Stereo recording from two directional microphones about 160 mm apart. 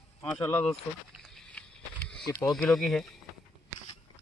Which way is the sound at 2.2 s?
25° left (ahead or behind).